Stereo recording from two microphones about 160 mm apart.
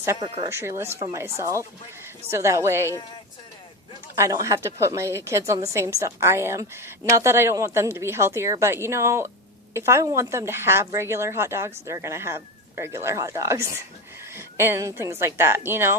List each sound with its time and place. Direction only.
0.0 s a woman's voice: 15° right (ahead or behind)
4.2 s a woman's voice: 20° right (ahead or behind)